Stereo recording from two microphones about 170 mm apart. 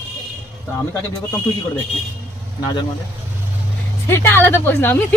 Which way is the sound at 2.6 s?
25° left (ahead or behind).